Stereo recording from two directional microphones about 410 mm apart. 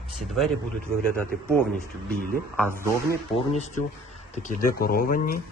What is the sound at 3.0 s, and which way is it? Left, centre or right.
Speech, centre.